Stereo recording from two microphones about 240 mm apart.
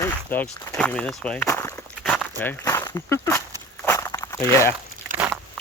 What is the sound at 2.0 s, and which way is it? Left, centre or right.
Speech, centre.